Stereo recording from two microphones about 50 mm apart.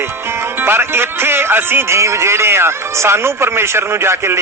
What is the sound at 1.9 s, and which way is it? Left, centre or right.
Speech, right.